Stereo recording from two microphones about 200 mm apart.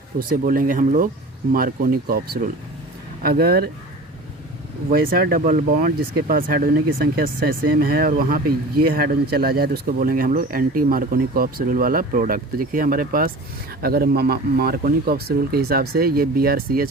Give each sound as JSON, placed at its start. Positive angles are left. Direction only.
{"t": 0.2, "sound": "speech", "side_deg": -45}
{"t": 4.9, "sound": "speech", "side_deg": -45}